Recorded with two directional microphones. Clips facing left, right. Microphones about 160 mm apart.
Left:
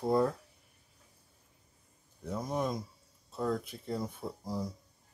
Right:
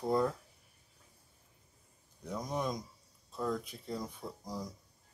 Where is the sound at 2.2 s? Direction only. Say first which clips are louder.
Left 3 dB; 5° left (ahead or behind).